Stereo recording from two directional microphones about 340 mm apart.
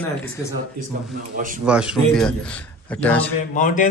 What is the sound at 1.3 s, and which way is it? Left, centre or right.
Speech, right.